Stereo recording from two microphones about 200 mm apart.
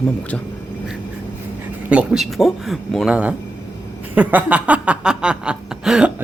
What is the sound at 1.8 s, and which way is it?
Chuckle, 5° right (ahead or behind).